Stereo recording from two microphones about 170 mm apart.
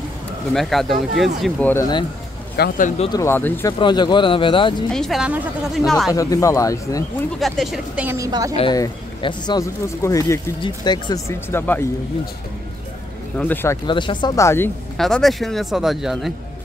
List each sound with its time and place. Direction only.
0.5 s speech: centre (ahead or behind)
1.4 s speech: 10° left (ahead or behind)
2.5 s speech: 65° left (ahead or behind)
3.1 s speech: 15° left (ahead or behind)
3.8 s speech: 25° left (ahead or behind)
4.9 s speech: centre (ahead or behind)
6.1 s speech: 20° left (ahead or behind)
7.3 s a woman's voice: centre (ahead or behind); by 8.5 s 20° right (ahead or behind)
8.7 s speech: 25° left (ahead or behind)
13.4 s speech: 10° left (ahead or behind)
13.8 s speech: 25° left (ahead or behind)
15.0 s speech: centre (ahead or behind)